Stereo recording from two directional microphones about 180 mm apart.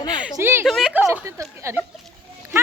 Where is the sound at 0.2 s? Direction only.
10° right (ahead or behind).